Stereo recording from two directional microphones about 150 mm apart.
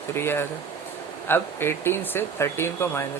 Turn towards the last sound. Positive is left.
turn(degrees=15)  # may be behind; listen again after turning